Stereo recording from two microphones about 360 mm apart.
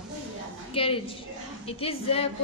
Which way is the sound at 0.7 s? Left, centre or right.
Centre.